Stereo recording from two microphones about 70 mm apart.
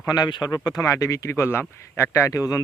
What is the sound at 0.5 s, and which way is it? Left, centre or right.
Speech, left.